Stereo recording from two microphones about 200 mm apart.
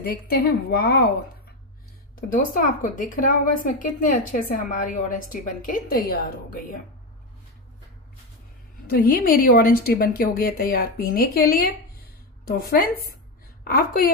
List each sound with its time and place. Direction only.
0.0 s a woman's voice: 50° left (ahead or behind)
2.1 s a woman's voice: 45° left (ahead or behind)
8.8 s a woman's voice: 45° left (ahead or behind)